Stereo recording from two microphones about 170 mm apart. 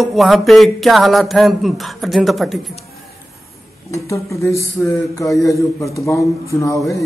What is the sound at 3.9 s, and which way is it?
A man's voice, 15° left (ahead or behind).